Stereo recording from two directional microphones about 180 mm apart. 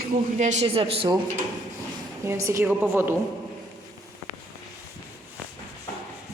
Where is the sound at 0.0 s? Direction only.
40° right (ahead or behind).